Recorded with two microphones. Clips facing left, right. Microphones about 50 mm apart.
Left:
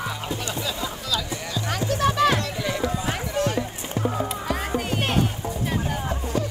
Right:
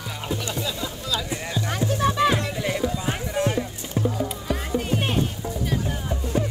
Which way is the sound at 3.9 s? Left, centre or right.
Left.